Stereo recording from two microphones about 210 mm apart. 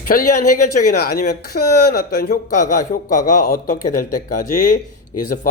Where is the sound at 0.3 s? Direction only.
90° left.